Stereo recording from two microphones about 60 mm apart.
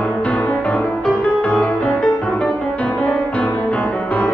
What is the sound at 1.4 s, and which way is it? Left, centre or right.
Music, left.